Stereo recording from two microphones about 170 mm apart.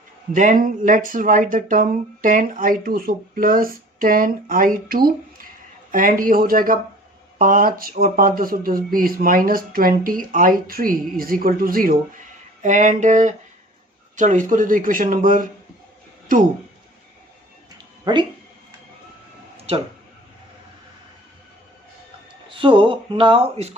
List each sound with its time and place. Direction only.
0.3 s speech: 50° right (ahead or behind)
12.6 s speech: 45° right (ahead or behind)
18.0 s speech: 25° right (ahead or behind)
19.5 s a sound: 35° right (ahead or behind)
22.4 s speech: 30° right (ahead or behind)